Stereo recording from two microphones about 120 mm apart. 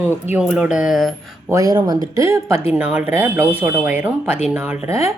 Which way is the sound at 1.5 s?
30° right (ahead or behind).